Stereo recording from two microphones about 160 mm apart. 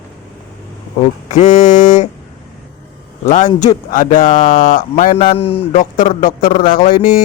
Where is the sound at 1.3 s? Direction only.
50° left (ahead or behind).